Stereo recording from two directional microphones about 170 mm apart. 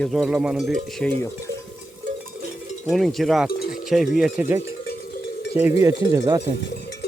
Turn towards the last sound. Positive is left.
turn(degrees=-20)  # may be behind; listen again after turning